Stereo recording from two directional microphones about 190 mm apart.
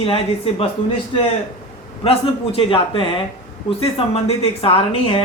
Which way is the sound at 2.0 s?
30° left (ahead or behind).